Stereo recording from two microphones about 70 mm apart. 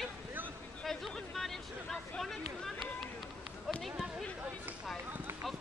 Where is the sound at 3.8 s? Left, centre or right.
Centre.